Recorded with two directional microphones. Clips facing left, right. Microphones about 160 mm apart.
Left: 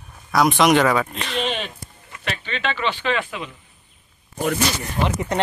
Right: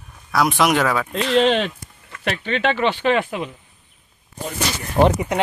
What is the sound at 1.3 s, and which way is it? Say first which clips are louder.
Speech: right 10 dB; 90° right.